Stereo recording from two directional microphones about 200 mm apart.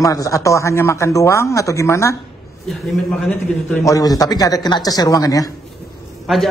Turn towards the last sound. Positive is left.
turn(degrees=0)  # may be behind; listen again after turning